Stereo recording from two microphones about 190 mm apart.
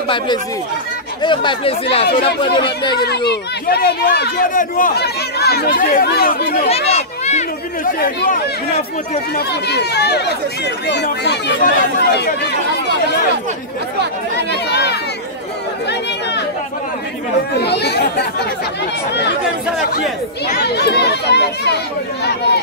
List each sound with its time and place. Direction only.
1.2 s speech: 25° left (ahead or behind)
3.1 s speech: 60° left (ahead or behind)
6.9 s a sound: 35° left (ahead or behind)
8.0 s speech: 50° left (ahead or behind)
14.5 s a sound: 60° left (ahead or behind)
17.6 s speech: 60° left (ahead or behind)
20.5 s speech: 60° left (ahead or behind)